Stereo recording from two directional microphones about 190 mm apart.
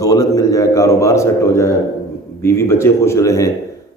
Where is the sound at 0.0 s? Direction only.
20° left (ahead or behind).